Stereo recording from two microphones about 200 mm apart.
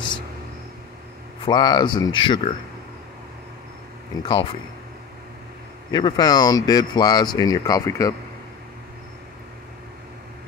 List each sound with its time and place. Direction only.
1.4 s speech: 20° left (ahead or behind)
4.2 s speech: 25° left (ahead or behind)
5.9 s speech: 20° left (ahead or behind)